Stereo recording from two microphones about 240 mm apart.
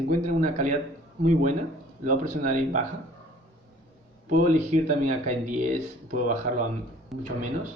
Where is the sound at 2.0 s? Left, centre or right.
Right.